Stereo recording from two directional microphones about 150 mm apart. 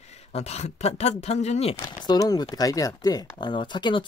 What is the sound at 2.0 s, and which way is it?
Speech, 25° left (ahead or behind).